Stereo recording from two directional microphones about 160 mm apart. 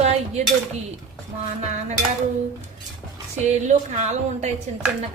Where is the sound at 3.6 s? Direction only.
45° right (ahead or behind).